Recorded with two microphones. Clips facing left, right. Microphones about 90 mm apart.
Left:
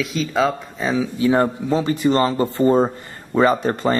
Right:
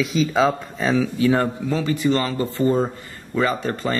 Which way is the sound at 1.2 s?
25° left (ahead or behind).